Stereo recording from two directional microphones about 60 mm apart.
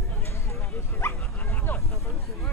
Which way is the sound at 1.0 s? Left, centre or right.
Left.